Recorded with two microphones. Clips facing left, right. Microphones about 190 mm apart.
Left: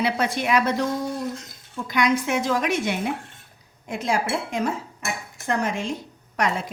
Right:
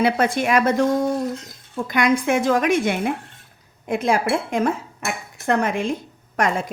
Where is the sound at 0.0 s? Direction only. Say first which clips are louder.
Right 5 dB; 50° right (ahead or behind).